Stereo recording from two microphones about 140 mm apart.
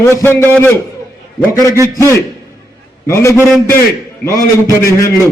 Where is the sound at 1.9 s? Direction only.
20° left (ahead or behind).